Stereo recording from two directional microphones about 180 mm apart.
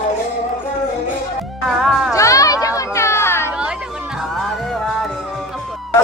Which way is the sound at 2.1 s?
15° left (ahead or behind).